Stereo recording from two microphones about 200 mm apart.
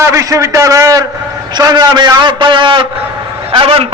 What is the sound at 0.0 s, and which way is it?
A man's voice, 15° right (ahead or behind).